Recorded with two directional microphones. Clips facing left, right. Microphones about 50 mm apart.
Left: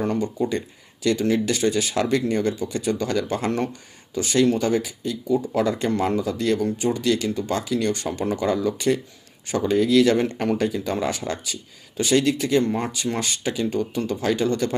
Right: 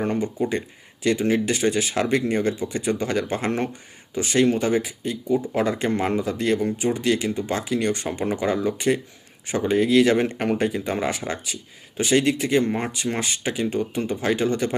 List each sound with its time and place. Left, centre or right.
0.0 s speech: right